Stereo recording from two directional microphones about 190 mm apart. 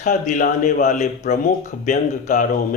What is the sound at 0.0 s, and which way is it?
Speech, 45° left (ahead or behind).